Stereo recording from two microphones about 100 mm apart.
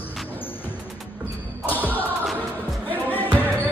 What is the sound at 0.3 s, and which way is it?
Music, 20° left (ahead or behind).